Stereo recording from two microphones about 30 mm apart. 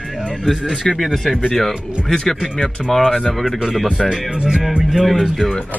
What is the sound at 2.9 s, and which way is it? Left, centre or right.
Speech, centre.